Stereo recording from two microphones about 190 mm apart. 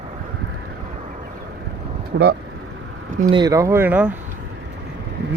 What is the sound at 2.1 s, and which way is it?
Speech, 55° right (ahead or behind).